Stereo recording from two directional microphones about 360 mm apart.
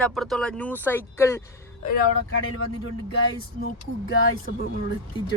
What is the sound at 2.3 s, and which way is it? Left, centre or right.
Speech, left.